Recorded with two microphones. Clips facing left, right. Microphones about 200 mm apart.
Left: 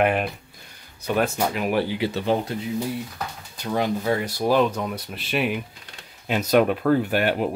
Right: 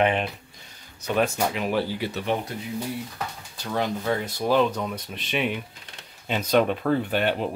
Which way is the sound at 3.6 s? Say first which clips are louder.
Left 3 dB; 10° left (ahead or behind).